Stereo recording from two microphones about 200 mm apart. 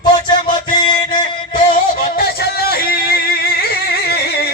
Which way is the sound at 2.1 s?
50° left (ahead or behind).